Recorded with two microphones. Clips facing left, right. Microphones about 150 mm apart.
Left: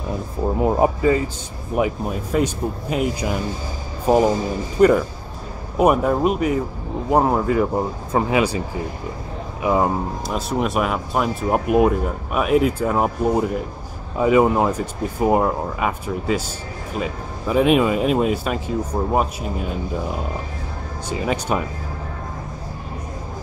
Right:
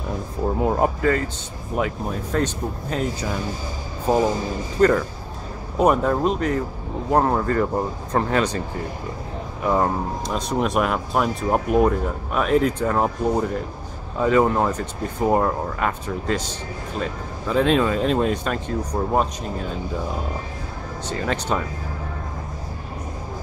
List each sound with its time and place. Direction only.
0.7 s a man's voice: 10° left (ahead or behind)
21.1 s speech: 10° left (ahead or behind)